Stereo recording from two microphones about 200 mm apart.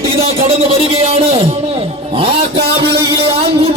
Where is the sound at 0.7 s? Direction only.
30° right (ahead or behind).